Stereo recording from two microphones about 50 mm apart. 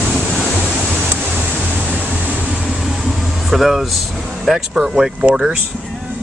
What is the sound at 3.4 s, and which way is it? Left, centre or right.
Speech, centre.